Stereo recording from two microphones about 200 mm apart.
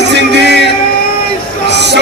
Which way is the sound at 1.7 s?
60° right (ahead or behind).